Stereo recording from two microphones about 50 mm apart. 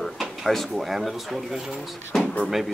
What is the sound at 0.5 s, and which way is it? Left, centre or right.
Speech, centre.